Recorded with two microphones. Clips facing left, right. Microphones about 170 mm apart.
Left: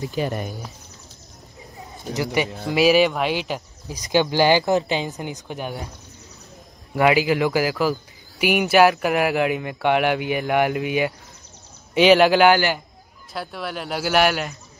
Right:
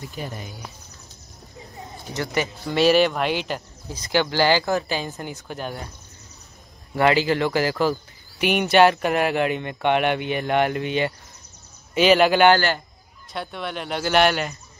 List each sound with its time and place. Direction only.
0.0 s speech: 80° left
2.7 s speech: 5° left (ahead or behind)
7.0 s speech: 10° left (ahead or behind)